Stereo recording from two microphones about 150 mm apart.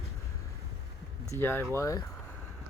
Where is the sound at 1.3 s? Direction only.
15° left (ahead or behind).